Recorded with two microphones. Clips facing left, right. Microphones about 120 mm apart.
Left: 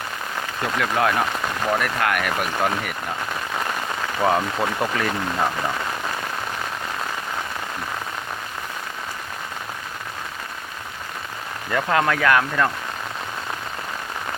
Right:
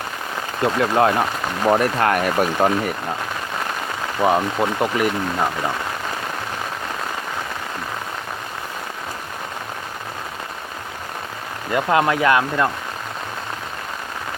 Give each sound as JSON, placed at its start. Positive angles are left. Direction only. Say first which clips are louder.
{"t": 0.6, "sound": "speech", "louder": "right 5 dB", "side_deg": -30}
{"t": 4.2, "sound": "speech", "louder": "right 3 dB", "side_deg": -15}
{"t": 11.7, "sound": "speech", "louder": "right 3 dB", "side_deg": -20}